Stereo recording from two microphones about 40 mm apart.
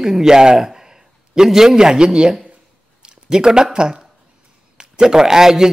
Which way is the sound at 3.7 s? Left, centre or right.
Right.